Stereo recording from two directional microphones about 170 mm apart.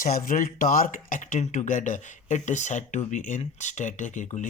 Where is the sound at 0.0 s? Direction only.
55° left (ahead or behind).